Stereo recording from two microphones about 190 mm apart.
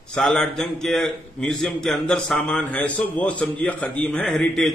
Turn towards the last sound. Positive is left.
turn(degrees=5)  # may be behind; listen again after turning